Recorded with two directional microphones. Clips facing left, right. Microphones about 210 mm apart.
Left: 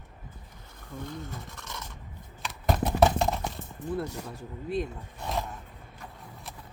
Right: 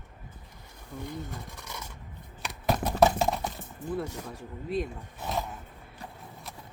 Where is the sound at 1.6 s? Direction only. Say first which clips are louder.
Even; 10° right (ahead or behind).